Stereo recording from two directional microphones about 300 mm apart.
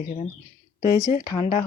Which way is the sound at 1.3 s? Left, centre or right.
Centre.